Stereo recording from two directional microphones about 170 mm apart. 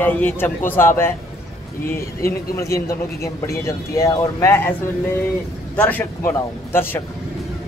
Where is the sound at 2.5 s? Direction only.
20° left (ahead or behind).